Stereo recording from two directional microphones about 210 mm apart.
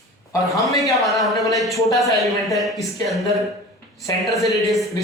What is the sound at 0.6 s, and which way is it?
Speech, 15° left (ahead or behind).